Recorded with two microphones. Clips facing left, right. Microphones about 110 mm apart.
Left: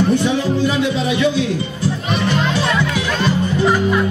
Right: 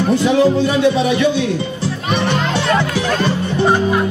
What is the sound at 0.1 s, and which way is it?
Speech, 90° right.